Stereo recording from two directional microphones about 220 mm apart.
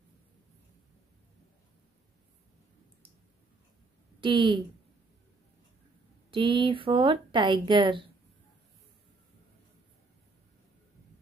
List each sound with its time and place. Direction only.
4.2 s a woman's voice: 20° right (ahead or behind)
6.3 s speech: 20° right (ahead or behind)